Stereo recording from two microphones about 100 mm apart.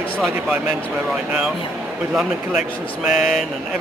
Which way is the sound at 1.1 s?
10° right (ahead or behind).